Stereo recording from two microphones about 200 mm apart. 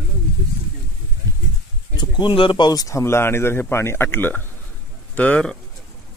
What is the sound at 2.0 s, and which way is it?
Speech, 25° left (ahead or behind).